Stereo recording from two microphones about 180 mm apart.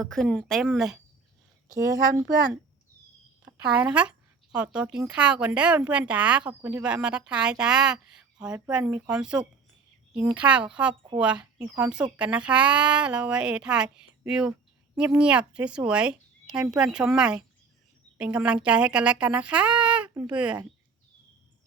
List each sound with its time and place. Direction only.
0.0 s speech: centre (ahead or behind)
1.7 s speech: 20° right (ahead or behind)
3.8 s speech: 5° right (ahead or behind)